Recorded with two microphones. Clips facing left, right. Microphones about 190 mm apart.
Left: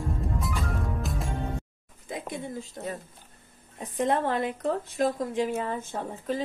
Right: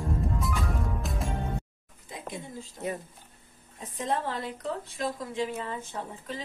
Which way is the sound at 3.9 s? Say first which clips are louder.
Left 5 dB; 60° left (ahead or behind).